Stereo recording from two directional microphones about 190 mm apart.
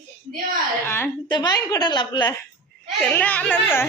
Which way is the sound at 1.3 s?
20° left (ahead or behind).